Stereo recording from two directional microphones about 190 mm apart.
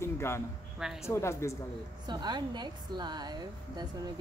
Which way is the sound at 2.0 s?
25° right (ahead or behind).